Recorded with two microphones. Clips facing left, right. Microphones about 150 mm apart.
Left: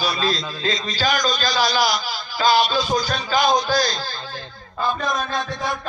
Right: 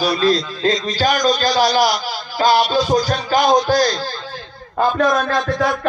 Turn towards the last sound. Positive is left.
turn(degrees=-75)  # may be behind; listen again after turning